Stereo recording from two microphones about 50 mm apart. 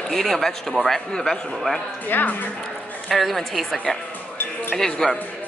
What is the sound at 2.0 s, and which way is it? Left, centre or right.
Speech, left.